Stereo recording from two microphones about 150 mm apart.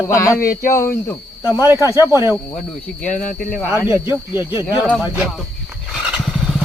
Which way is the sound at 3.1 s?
55° left (ahead or behind).